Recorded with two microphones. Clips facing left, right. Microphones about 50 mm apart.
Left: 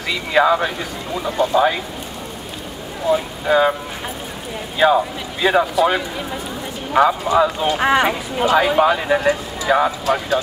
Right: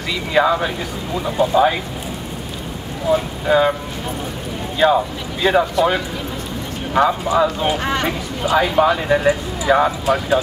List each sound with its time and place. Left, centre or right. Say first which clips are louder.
0.1 s speech: left 1 dB; centre
3.1 s speech: right 1 dB; centre
4.7 s speech: even; centre
7.7 s speech: left 4 dB; centre
8.5 s speech: even; centre